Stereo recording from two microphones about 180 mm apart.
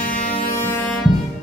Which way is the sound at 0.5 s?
15° left (ahead or behind).